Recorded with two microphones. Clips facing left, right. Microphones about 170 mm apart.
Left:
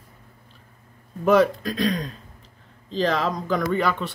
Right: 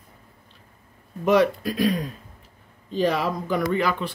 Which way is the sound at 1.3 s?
5° right (ahead or behind).